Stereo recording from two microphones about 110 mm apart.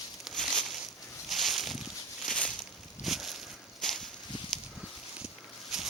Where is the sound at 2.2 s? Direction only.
10° left (ahead or behind).